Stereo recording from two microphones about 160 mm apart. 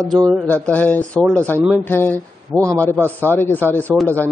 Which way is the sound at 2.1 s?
20° right (ahead or behind).